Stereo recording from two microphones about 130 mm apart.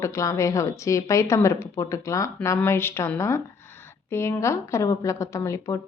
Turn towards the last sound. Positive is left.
turn(degrees=25)  # may be behind; listen again after turning